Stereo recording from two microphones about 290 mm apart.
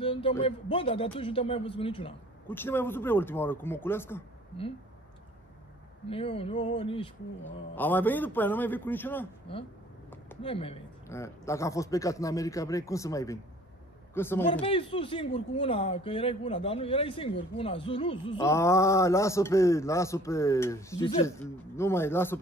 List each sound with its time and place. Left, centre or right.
0.0 s speech: centre
2.4 s speech: centre
6.0 s speech: centre
7.7 s speech: centre
10.4 s speech: centre
14.6 s speech: centre